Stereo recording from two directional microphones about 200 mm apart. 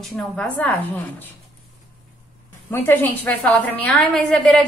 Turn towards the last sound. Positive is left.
turn(degrees=5)  # may be behind; listen again after turning